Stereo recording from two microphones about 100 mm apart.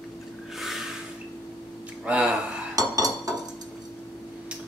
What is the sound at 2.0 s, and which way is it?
Speech, 10° right (ahead or behind).